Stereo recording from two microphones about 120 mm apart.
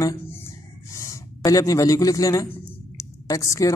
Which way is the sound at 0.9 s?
30° left (ahead or behind).